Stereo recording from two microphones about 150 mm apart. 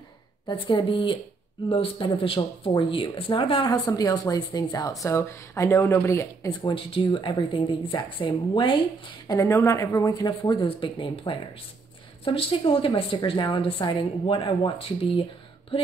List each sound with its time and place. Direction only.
0.5 s speech: 35° left (ahead or behind)
6.6 s speech: 35° left (ahead or behind)
9.4 s speech: 20° left (ahead or behind); by 15.2 s 35° left (ahead or behind)